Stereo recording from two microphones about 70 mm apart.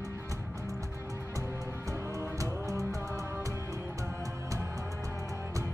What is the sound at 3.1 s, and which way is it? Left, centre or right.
Music, right.